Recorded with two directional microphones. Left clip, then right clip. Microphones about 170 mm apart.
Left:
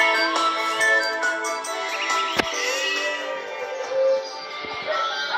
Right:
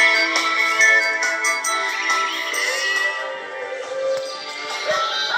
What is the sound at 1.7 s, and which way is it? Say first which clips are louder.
Music: right 4 dB; 40° left (ahead or behind).